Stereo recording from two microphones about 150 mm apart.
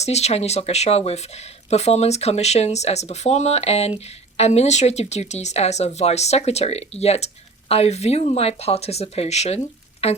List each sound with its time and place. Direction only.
0.0 s speech: 45° left (ahead or behind)